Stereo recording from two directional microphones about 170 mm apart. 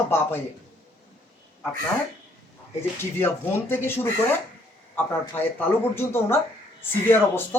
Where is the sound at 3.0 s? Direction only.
15° left (ahead or behind).